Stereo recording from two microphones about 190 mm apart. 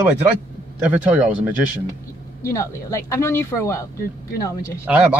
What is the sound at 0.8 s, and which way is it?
Speech, 5° right (ahead or behind).